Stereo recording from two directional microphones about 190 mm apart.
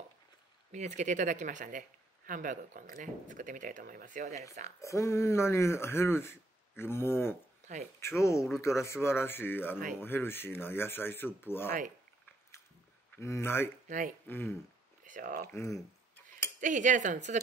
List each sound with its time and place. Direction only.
0.7 s speech: 40° right (ahead or behind)
4.8 s speech: 15° left (ahead or behind)
7.6 s speech: 40° right (ahead or behind)
8.0 s speech: 15° left (ahead or behind)
13.1 s speech: 15° left (ahead or behind)
13.8 s speech: 40° right (ahead or behind)
14.2 s speech: 10° left (ahead or behind)
15.0 s speech: 45° right (ahead or behind)
15.4 s speech: 15° left (ahead or behind)
16.5 s speech: 40° right (ahead or behind)